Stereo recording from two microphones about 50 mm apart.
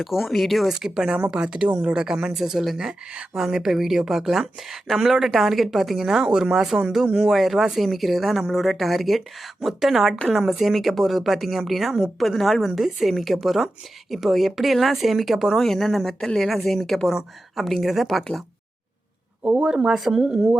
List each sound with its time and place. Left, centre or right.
0.0 s speech: centre
0.7 s speech: centre
19.6 s speech: centre